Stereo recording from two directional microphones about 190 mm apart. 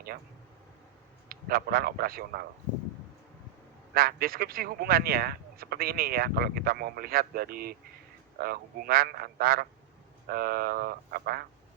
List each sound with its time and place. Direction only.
1.3 s speech: 50° right (ahead or behind)
3.9 s speech: 50° right (ahead or behind)